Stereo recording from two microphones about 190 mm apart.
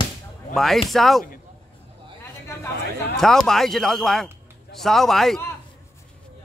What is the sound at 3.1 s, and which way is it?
Speech, centre (ahead or behind).